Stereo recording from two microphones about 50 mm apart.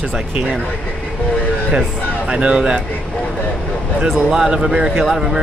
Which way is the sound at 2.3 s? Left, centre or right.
Centre.